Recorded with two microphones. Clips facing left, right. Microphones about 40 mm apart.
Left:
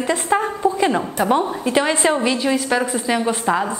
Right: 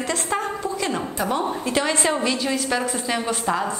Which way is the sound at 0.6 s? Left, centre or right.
Left.